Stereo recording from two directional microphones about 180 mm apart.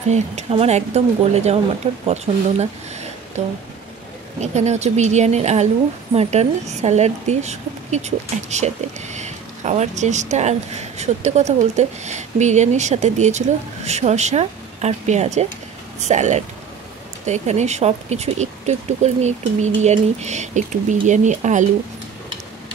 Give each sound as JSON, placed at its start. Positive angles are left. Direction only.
{"t": 0.1, "sound": "a woman's voice", "side_deg": -35}
{"t": 2.6, "sound": "a sound", "side_deg": -40}
{"t": 4.4, "sound": "a woman's voice", "side_deg": -40}